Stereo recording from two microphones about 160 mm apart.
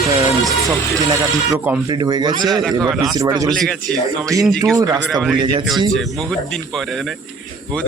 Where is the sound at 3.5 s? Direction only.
Centre (ahead or behind).